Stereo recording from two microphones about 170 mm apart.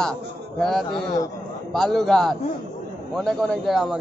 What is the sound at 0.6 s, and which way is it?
A man's voice, centre (ahead or behind).